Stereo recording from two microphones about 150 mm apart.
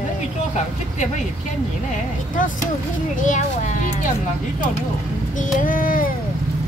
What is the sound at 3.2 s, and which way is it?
Speech, 55° left (ahead or behind).